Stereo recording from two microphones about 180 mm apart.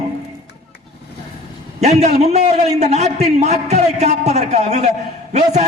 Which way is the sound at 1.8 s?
40° right (ahead or behind).